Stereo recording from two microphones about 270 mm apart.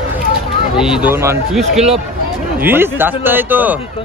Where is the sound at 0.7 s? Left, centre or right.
Centre.